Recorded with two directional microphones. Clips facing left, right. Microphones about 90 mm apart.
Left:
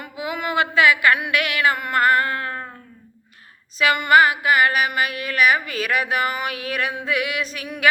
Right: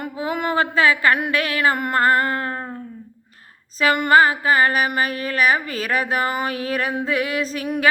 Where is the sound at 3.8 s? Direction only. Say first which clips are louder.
Right 1 dB; 35° right (ahead or behind).